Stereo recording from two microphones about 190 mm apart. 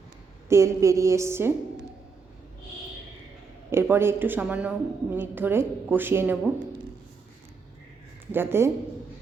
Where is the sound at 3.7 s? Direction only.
10° right (ahead or behind).